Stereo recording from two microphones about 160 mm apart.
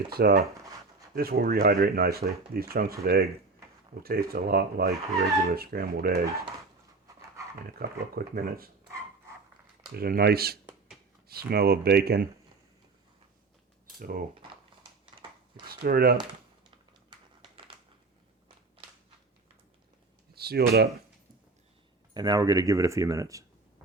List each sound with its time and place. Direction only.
0.1 s speech: 75° right (ahead or behind)
7.5 s speech: 65° right (ahead or behind)
9.9 s speech: 75° right (ahead or behind)
14.0 s cutlery: 65° right (ahead or behind)
15.6 s speech: 70° right (ahead or behind)
20.3 s speech: 80° right
22.1 s speech: 25° right (ahead or behind)